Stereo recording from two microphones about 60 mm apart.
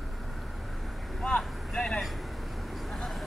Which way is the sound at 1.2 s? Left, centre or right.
Centre.